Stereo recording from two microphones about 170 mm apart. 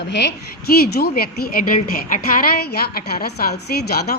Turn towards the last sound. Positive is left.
turn(degrees=65)  # may be behind; listen again after turning